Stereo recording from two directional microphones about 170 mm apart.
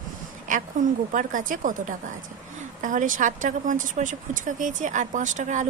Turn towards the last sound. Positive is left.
turn(degrees=-45)  # may be behind; listen again after turning